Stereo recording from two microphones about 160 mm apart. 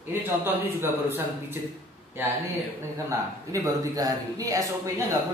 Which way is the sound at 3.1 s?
20° right (ahead or behind).